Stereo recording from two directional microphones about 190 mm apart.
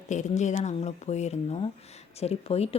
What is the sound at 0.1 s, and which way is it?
Speech, 40° left (ahead or behind).